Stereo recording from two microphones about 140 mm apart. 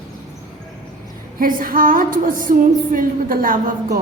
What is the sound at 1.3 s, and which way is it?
A woman's voice, 80° right.